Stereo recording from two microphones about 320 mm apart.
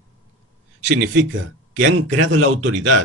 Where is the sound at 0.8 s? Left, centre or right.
Right.